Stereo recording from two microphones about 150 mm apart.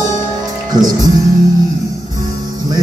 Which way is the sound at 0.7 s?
25° right (ahead or behind).